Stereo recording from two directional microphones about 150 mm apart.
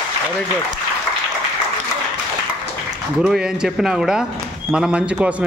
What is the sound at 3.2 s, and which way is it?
A man's voice, 5° right (ahead or behind).